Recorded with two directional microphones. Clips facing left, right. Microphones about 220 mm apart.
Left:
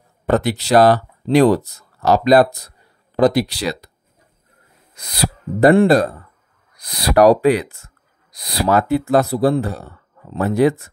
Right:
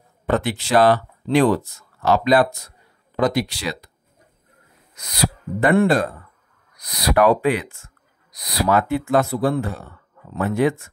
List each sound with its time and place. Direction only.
0.3 s speech: 40° left (ahead or behind)
4.9 s speech: 30° left (ahead or behind)